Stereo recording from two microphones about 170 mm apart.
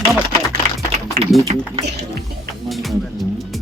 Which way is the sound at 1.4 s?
40° right (ahead or behind).